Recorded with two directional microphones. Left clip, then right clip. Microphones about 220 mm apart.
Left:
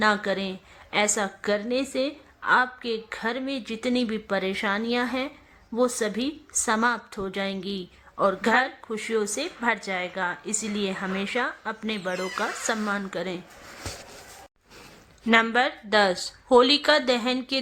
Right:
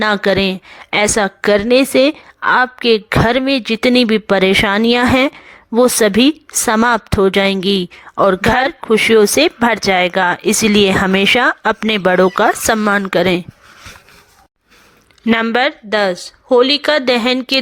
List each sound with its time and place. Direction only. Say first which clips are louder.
0.0 s a woman's voice: right 10 dB; 40° right (ahead or behind)
15.4 s speech: right 9 dB; 30° right (ahead or behind)